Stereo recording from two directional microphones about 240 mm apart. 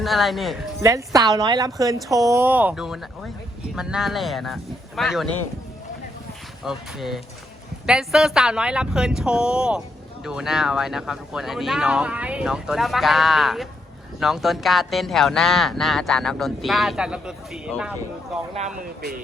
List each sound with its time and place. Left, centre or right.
0.0 s speech: centre
0.8 s speech: centre
6.7 s speech: centre
18.8 s speech: right